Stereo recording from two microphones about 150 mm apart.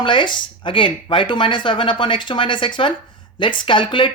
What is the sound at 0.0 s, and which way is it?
Speech, 35° left (ahead or behind).